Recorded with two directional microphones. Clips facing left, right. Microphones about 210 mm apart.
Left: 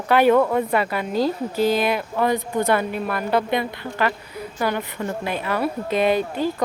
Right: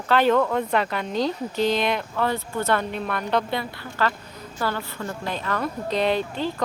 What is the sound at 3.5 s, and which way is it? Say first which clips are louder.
A woman's voice: left 5 dB; 15° left (ahead or behind).